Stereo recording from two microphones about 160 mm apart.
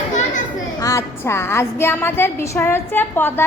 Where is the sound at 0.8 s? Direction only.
20° left (ahead or behind).